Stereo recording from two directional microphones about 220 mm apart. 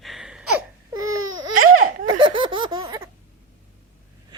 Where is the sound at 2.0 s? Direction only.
20° right (ahead or behind).